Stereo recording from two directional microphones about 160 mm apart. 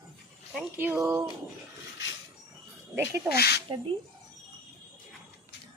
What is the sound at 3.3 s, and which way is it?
Speech, 85° left.